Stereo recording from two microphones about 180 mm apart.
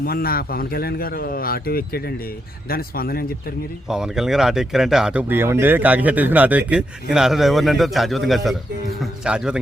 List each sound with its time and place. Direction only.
0.0 s a man's voice: 55° left (ahead or behind)
3.8 s speech: 5° right (ahead or behind)